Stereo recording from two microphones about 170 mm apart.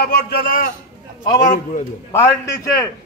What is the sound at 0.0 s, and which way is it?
A man's voice, 65° left (ahead or behind).